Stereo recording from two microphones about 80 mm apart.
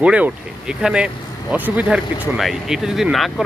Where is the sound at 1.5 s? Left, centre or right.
Right.